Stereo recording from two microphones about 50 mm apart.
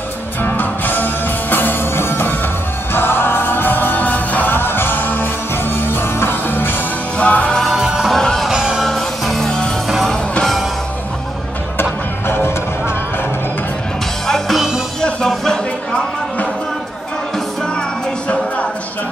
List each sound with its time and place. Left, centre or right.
0.4 s music: left
4.5 s music: left
7.2 s music: left
7.6 s music: centre
8.1 s music: centre
8.5 s music: centre
8.8 s music: centre
11.8 s music: left
14.2 s music: centre